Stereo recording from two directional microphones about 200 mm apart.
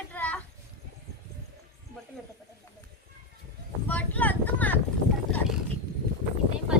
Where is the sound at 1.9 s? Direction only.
45° right (ahead or behind).